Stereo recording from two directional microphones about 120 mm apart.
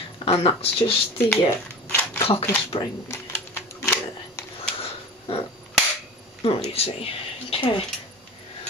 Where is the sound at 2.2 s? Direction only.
55° left (ahead or behind).